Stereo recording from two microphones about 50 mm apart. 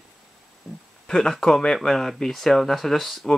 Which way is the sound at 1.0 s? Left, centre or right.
Centre.